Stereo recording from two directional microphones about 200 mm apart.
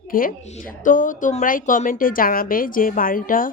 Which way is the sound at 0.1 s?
45° left (ahead or behind).